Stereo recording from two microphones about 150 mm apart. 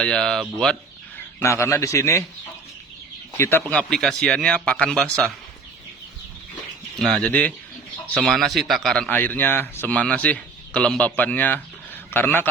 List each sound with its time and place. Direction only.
0.0 s speech: 5° left (ahead or behind)
1.4 s a man's voice: 20° left (ahead or behind)
3.3 s a man's voice: 15° left (ahead or behind)
3.7 s speech: 5° left (ahead or behind)
6.9 s a man's voice: 5° left (ahead or behind)